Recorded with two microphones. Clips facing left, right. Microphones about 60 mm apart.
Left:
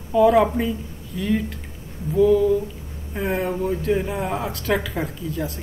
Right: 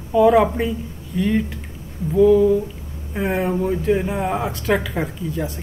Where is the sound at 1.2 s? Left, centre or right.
Centre.